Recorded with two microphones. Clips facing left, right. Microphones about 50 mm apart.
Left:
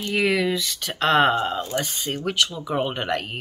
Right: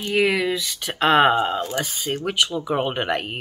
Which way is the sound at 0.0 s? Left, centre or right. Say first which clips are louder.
Right 1 dB; centre.